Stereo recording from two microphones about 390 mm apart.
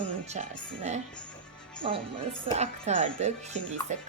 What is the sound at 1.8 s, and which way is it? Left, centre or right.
A woman's voice, centre.